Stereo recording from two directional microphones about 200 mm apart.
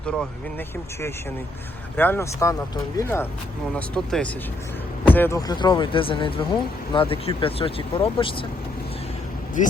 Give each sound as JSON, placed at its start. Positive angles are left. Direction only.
{"t": 0.0, "sound": "speech", "side_deg": 5}
{"t": 2.0, "sound": "speech", "side_deg": 10}
{"t": 3.8, "sound": "speech", "side_deg": 5}
{"t": 9.6, "sound": "speech", "side_deg": 40}